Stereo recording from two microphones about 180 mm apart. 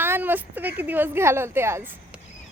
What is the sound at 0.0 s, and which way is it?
A woman's voice, 10° right (ahead or behind).